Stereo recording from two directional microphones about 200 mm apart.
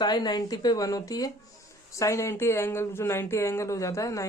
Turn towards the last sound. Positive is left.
turn(degrees=15)  # may be behind; listen again after turning